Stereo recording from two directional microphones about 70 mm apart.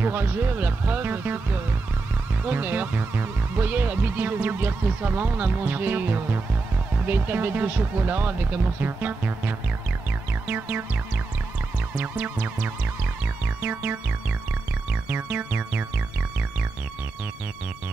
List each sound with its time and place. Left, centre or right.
0.0 s speech: right
2.4 s speech: right
12.0 s speech: right
14.9 s music: right